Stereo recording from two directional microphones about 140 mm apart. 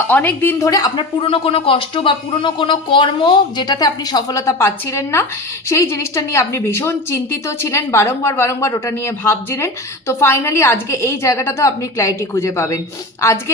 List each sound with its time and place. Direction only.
0.1 s a woman's voice: 15° left (ahead or behind)